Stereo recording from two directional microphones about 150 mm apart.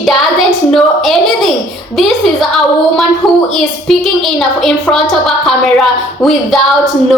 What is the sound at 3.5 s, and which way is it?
A woman's voice, centre (ahead or behind).